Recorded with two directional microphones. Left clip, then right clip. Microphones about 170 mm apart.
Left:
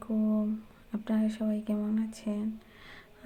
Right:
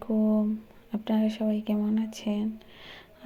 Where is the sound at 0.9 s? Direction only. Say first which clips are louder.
Right 4 dB; 15° right (ahead or behind).